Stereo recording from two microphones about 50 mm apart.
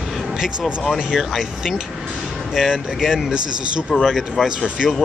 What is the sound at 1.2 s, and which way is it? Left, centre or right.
Speech, centre.